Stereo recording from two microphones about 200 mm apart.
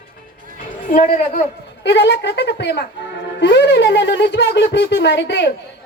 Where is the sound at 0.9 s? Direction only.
45° left (ahead or behind).